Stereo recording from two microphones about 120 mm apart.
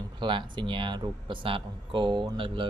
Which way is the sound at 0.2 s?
40° right (ahead or behind).